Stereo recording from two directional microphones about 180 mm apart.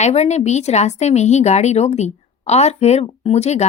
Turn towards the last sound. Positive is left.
turn(degrees=35)  # may be behind; listen again after turning